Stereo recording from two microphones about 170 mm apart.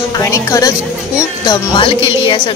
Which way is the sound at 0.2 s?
20° left (ahead or behind).